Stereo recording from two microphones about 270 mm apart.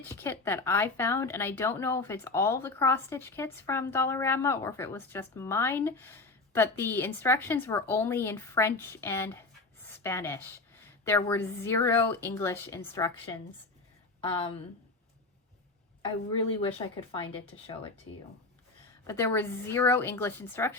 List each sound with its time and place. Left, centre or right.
0.0 s speech: centre
9.8 s a sound: centre
11.0 s speech: centre
16.6 s speech: centre
19.0 s speech: centre